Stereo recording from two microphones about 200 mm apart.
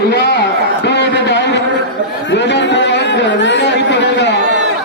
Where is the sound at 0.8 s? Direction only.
60° left (ahead or behind).